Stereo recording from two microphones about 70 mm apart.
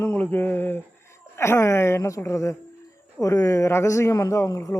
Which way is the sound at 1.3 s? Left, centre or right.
Left.